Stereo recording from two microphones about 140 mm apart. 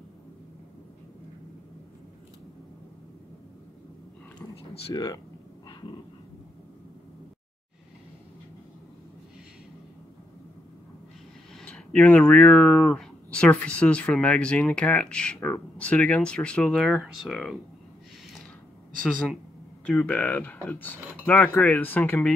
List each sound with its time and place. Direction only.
4.4 s a sound: 30° left (ahead or behind)
11.6 s speech: 10° left (ahead or behind)
19.9 s speech: 5° left (ahead or behind)